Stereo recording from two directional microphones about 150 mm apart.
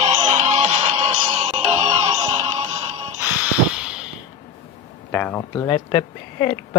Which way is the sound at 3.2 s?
10° right (ahead or behind).